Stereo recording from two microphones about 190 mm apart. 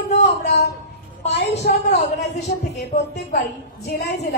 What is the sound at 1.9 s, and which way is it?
Speech, 35° left (ahead or behind).